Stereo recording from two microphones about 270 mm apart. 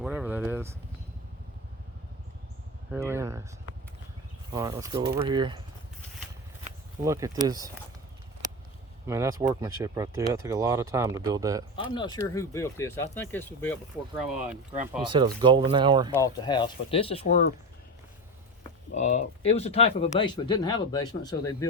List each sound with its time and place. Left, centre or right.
0.0 s a sound: centre
2.9 s speech: centre
4.5 s speech: centre
7.0 s speech: centre
9.0 s speech: centre
11.8 s speech: centre
14.3 s speech: centre
15.1 s speech: centre
16.1 s speech: centre
18.9 s speech: left